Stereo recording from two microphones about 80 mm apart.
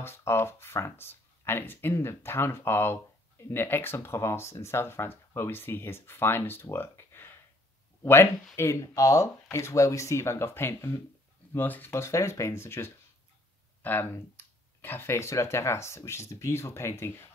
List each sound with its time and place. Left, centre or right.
0.0 s speech: left
11.5 s speech: left
11.9 s speech: left